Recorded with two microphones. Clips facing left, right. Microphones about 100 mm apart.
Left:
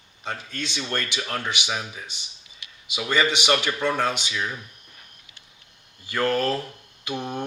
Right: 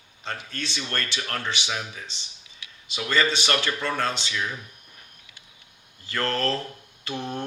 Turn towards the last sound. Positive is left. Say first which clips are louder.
# left 2 dB
turn(degrees=15)  # may be behind; listen again after turning